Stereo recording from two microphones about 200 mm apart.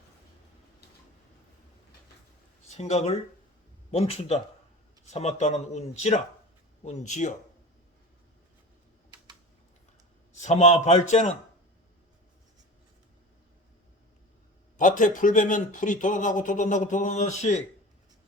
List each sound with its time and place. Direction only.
2.7 s speech: 35° left (ahead or behind)
10.4 s speech: 35° left (ahead or behind)
14.8 s speech: 40° left (ahead or behind)